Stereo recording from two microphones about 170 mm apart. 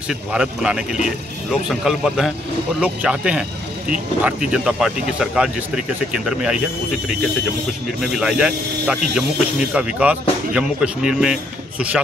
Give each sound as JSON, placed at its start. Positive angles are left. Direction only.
{"t": 0.1, "sound": "speech", "side_deg": -5}
{"t": 4.5, "sound": "speech", "side_deg": -5}
{"t": 8.0, "sound": "speech", "side_deg": 0}